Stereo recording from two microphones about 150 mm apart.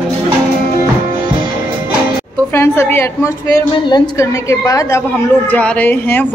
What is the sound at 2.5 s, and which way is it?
A woman's voice, 15° left (ahead or behind).